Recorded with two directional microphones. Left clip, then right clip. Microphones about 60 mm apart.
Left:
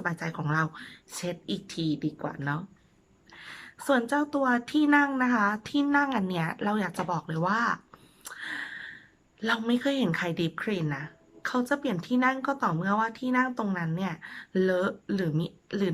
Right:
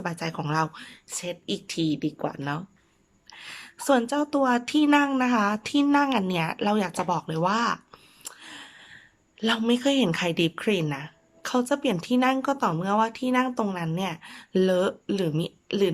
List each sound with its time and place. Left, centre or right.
0.0 s speech: right
8.2 s a sound: right
9.4 s speech: right